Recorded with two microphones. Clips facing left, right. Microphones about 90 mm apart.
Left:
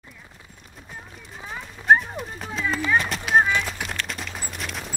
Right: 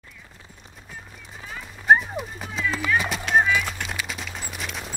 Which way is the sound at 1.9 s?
Centre (ahead or behind).